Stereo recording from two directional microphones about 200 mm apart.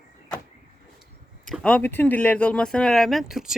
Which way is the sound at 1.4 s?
5° left (ahead or behind).